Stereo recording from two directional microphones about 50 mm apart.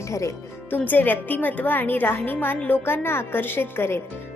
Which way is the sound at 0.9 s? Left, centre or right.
Left.